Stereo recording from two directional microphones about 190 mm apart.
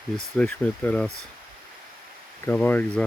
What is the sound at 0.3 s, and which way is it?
Speech, 5° left (ahead or behind).